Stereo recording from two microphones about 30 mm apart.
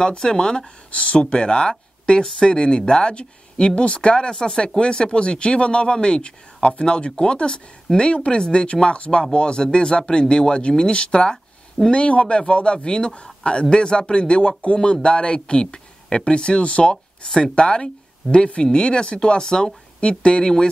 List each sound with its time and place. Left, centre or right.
0.2 s speech: left
0.9 s a man's voice: left
7.5 s speech: left
8.1 s a man's voice: left